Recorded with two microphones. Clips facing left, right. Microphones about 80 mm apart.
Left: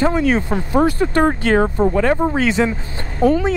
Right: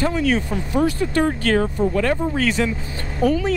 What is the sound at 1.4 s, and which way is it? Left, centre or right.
Speech, left.